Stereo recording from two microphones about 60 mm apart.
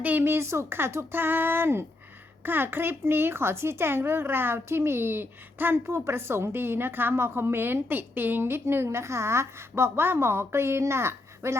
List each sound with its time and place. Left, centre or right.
0.0 s speech: right
0.3 s speech: right
1.1 s speech: right